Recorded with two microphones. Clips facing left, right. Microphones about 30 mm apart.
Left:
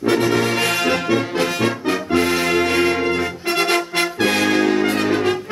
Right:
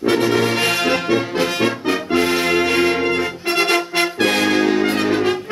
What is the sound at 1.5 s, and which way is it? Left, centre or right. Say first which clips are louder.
Music: right 1 dB; centre.